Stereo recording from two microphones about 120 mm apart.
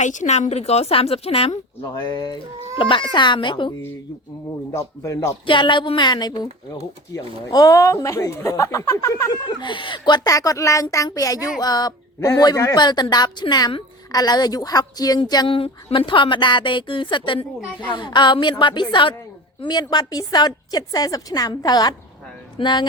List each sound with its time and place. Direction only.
0.0 s a woman's voice: 90° left; by 1.5 s 55° left (ahead or behind)
2.0 s a woman's voice: 35° left (ahead or behind)
4.7 s speech: 25° left (ahead or behind)
5.5 s a woman's voice: 45° left (ahead or behind); by 9.3 s 25° left (ahead or behind)
9.3 s a woman's voice: 40° left (ahead or behind)